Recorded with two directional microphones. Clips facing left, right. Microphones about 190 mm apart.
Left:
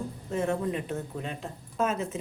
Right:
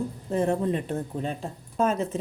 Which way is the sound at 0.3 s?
35° right (ahead or behind).